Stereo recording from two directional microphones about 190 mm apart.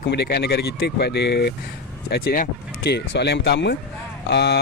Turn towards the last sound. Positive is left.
turn(degrees=60)  # may be behind; listen again after turning